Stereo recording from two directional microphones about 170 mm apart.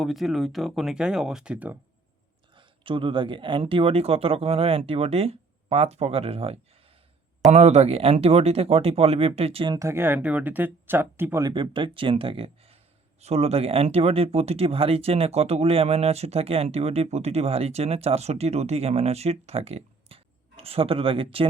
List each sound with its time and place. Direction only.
0.0 s speech: centre (ahead or behind)
2.6 s speech: 30° right (ahead or behind)
9.7 s speech: 15° right (ahead or behind)
11.5 s speech: 30° right (ahead or behind)